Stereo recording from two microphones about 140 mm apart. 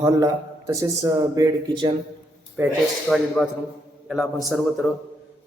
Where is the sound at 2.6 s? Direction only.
15° right (ahead or behind).